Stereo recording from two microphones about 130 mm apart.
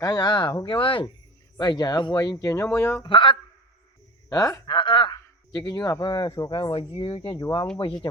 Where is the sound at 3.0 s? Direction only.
40° left (ahead or behind).